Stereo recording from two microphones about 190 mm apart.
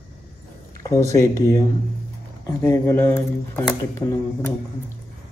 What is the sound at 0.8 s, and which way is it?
Speech, 15° left (ahead or behind).